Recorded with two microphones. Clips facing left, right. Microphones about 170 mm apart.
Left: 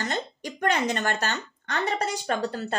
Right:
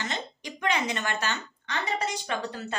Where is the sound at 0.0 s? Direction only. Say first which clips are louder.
Left 4 dB; 45° left (ahead or behind).